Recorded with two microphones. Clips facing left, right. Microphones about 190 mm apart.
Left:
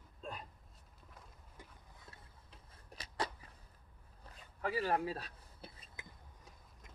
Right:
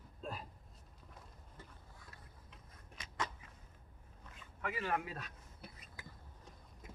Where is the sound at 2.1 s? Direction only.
30° left (ahead or behind).